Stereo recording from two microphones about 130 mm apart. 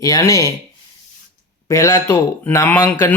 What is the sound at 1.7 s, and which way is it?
Speech, 20° left (ahead or behind).